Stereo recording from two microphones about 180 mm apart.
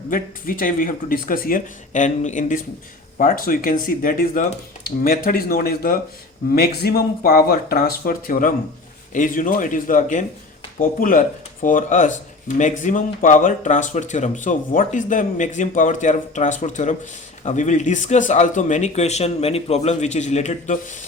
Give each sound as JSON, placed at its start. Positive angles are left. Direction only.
{"t": 0.1, "sound": "speech", "side_deg": 50}